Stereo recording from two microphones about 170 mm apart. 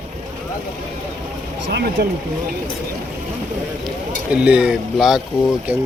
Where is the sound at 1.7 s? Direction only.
75° right (ahead or behind).